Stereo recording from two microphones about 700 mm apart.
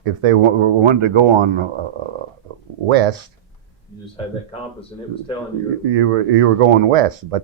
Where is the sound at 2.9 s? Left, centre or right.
Right.